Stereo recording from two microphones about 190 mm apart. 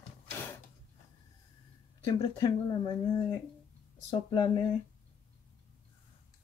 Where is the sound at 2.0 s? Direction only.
20° left (ahead or behind).